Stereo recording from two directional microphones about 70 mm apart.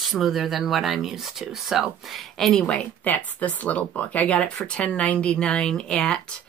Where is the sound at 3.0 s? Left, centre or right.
Left.